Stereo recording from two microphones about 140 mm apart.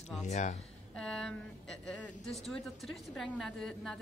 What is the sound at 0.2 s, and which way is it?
Speech, 55° left (ahead or behind).